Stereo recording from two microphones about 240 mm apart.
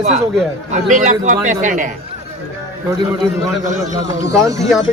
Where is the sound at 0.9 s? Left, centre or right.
Right.